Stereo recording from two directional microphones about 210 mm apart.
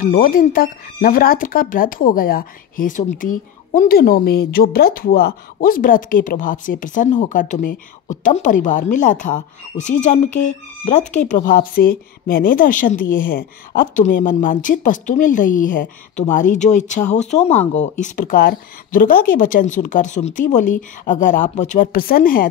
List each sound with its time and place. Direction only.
0.0 s speech: 40° left (ahead or behind)